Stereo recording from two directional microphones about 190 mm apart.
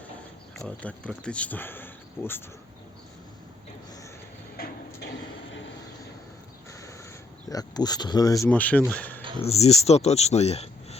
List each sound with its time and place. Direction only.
0.5 s speech: 5° left (ahead or behind)
4.6 s a sound: 50° left (ahead or behind)
6.7 s crow: 15° left (ahead or behind)
7.5 s speech: 20° left (ahead or behind)
8.4 s speech: 10° left (ahead or behind)
8.9 s a sound: 10° left (ahead or behind)
9.4 s speech: 35° left (ahead or behind)